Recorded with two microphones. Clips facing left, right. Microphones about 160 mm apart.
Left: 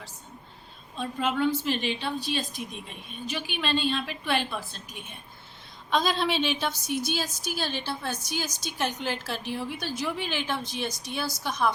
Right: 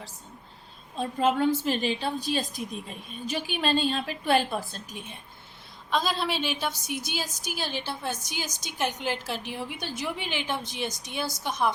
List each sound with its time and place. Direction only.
0.9 s a woman's voice: 40° right (ahead or behind)
5.9 s a woman's voice: 5° right (ahead or behind); by 11.7 s 20° right (ahead or behind)